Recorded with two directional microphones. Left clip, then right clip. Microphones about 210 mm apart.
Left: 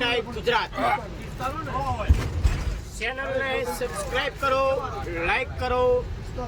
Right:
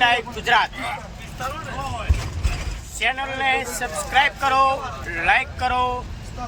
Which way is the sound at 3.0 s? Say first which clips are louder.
Right 5 dB; 5° left (ahead or behind).